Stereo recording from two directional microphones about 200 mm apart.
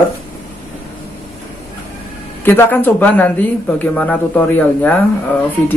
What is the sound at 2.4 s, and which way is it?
Speech, 10° left (ahead or behind).